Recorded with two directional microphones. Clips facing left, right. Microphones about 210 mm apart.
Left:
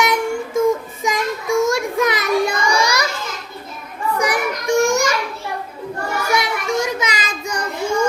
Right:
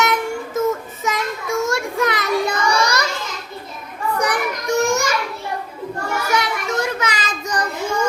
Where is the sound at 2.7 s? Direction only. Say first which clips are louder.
Left 1 dB; 10° left (ahead or behind).